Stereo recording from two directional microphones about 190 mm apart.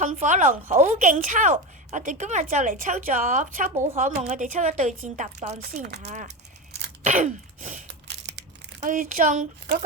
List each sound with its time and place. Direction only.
0.0 s a woman's voice: 40° right (ahead or behind)
7.0 s gasp: 45° right (ahead or behind)
7.9 s crushing: 65° right (ahead or behind)
8.8 s speech: 45° right (ahead or behind)